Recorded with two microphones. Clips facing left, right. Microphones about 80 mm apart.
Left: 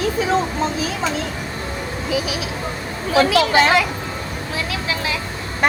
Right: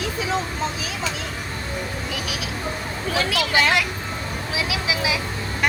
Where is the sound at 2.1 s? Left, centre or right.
Centre.